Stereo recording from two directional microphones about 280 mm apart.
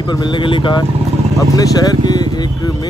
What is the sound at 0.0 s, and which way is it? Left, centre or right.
Speech, centre.